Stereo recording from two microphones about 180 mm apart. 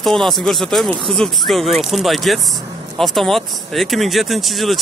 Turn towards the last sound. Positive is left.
turn(degrees=0)  # may be behind; listen again after turning